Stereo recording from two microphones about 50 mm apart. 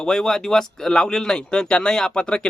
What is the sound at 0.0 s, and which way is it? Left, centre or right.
Speech, centre.